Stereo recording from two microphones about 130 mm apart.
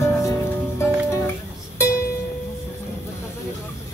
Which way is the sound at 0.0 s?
20° left (ahead or behind).